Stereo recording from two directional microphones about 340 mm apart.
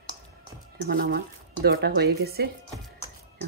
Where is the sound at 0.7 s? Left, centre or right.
Right.